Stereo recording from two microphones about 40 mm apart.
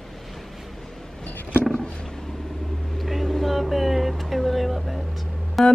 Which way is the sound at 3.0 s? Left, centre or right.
Centre.